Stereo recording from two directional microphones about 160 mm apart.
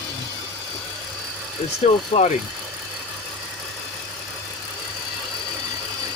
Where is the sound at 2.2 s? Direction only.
40° left (ahead or behind).